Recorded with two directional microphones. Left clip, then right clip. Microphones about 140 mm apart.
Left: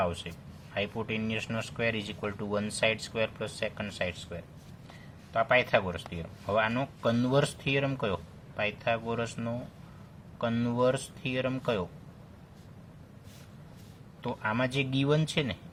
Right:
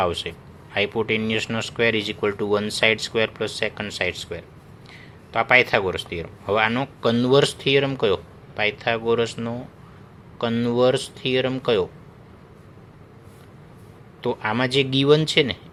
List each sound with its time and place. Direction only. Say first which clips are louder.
0.0 s speech: right 9 dB; 30° right (ahead or behind)
14.2 s speech: right 8 dB; 25° right (ahead or behind)